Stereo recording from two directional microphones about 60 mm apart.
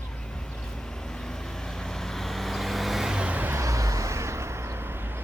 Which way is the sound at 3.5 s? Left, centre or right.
Right.